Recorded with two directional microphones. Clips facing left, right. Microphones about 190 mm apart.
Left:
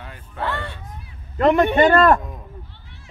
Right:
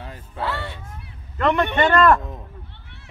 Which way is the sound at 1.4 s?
40° left (ahead or behind).